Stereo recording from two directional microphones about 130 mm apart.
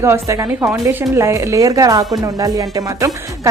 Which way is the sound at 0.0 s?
20° right (ahead or behind).